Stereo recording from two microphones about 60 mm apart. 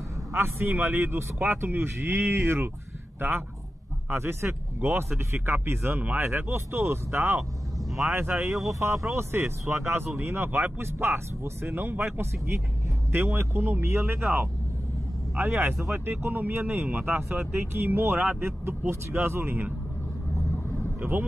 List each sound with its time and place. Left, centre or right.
0.3 s a man's voice: right